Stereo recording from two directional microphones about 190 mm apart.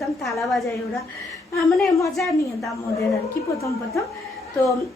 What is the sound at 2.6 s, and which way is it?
Speech, 15° left (ahead or behind).